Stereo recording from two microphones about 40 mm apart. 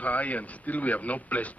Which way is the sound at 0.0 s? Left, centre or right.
Left.